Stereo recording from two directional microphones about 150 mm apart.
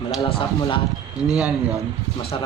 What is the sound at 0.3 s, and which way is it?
Speech, 35° left (ahead or behind).